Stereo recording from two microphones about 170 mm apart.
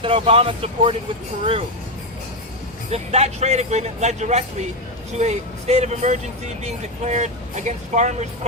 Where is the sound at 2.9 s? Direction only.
40° right (ahead or behind).